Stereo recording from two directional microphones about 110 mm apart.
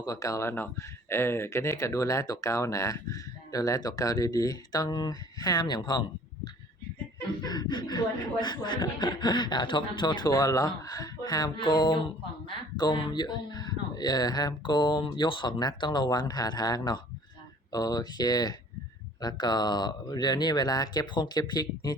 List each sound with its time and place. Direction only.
0.0 s speech: 30° left (ahead or behind)